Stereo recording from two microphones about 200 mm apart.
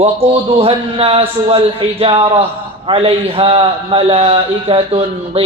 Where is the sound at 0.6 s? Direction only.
30° right (ahead or behind).